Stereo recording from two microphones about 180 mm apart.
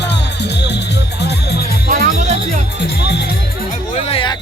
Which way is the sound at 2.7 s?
65° left (ahead or behind).